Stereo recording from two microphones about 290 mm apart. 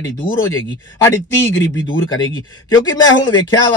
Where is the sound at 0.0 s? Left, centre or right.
Left.